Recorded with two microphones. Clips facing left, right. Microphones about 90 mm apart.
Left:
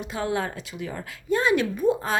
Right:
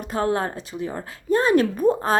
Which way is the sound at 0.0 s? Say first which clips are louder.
Right 4 dB; 45° right (ahead or behind).